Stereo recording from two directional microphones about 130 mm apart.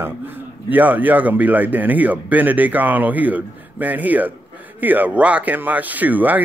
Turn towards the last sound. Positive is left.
turn(degrees=-15)  # may be behind; listen again after turning